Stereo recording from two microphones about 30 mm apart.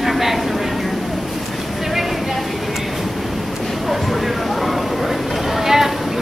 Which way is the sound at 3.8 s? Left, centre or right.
Centre.